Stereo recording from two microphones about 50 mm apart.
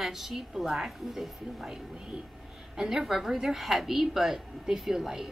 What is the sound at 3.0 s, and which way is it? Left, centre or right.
A woman's voice, centre.